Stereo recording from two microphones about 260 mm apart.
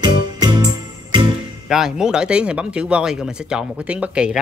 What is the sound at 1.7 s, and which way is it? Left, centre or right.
Speech, centre.